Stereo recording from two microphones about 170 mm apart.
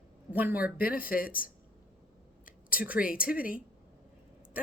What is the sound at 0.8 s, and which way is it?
Speech, 60° left (ahead or behind).